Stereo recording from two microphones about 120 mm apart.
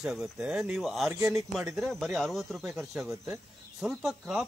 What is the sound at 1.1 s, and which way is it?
Speech, 25° right (ahead or behind).